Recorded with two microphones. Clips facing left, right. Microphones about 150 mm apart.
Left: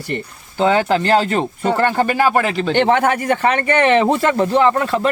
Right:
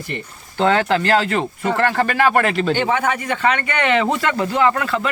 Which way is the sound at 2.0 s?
15° left (ahead or behind).